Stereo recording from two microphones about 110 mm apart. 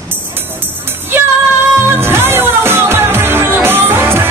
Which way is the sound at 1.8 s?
20° right (ahead or behind).